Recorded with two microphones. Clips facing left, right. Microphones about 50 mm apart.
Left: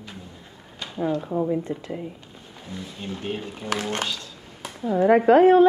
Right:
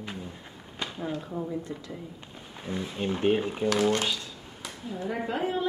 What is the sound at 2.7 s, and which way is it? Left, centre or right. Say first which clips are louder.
Speech: right 4 dB; right.